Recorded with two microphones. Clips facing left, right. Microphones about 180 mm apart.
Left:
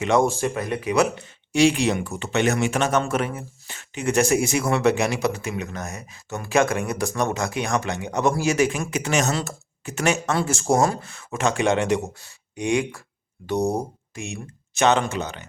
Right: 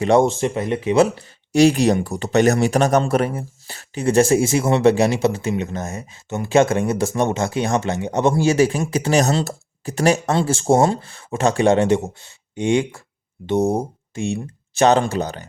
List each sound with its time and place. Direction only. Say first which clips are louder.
0.0 s speech: right 5 dB; 35° right (ahead or behind)
0.3 s speech: right 4 dB; 25° right (ahead or behind)
1.5 s speech: right 5 dB; 40° right (ahead or behind)